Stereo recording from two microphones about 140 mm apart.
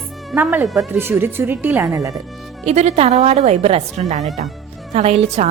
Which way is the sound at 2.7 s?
50° right (ahead or behind).